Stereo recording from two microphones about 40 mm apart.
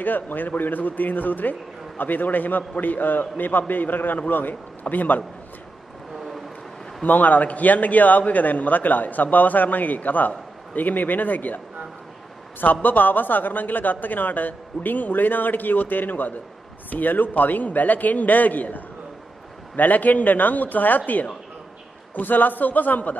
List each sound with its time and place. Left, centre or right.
0.0 s a man's voice: left
6.1 s vehicle: centre
7.1 s a man's voice: left
12.8 s a man's voice: left